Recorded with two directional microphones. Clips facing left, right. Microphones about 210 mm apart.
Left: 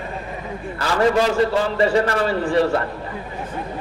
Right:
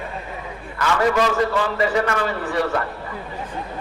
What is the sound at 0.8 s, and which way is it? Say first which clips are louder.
A man's voice: left 1 dB; 30° left (ahead or behind).